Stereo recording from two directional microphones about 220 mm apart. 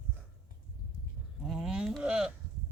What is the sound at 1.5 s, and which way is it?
Sheep, centre (ahead or behind).